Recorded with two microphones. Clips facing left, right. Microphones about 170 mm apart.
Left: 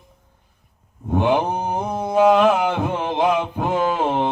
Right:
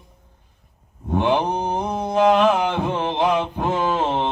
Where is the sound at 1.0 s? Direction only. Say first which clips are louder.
Left 1 dB; 10° left (ahead or behind).